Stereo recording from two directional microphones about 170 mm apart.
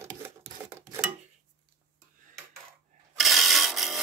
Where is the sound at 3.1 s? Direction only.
Centre (ahead or behind).